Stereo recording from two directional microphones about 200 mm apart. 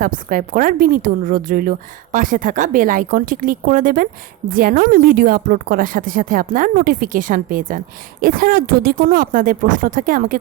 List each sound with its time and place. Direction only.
0.0 s a woman's voice: 45° right (ahead or behind)